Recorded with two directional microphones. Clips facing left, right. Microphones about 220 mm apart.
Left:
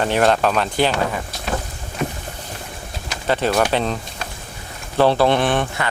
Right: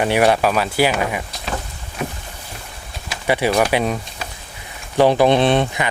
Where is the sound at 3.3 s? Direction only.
10° right (ahead or behind).